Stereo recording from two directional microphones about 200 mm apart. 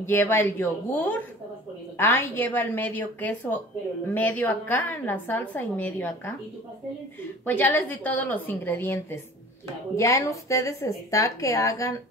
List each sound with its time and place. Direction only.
0.0 s a woman's voice: 10° left (ahead or behind)
7.4 s a woman's voice: 10° left (ahead or behind)